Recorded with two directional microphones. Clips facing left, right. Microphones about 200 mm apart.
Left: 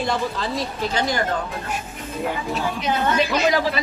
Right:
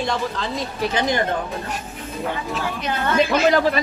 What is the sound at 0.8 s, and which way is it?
Speech, 20° right (ahead or behind).